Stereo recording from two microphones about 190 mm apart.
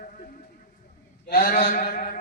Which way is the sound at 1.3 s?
50° left (ahead or behind).